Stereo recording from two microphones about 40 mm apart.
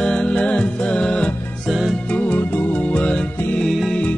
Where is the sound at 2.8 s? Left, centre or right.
Left.